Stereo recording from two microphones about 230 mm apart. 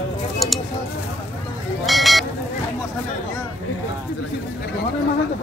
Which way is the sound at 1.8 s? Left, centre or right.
Centre.